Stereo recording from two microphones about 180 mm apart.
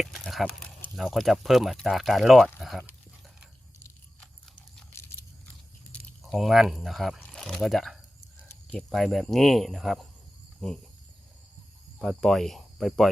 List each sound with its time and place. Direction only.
0.0 s speech: centre (ahead or behind)
5.9 s speech: centre (ahead or behind)
11.9 s speech: centre (ahead or behind)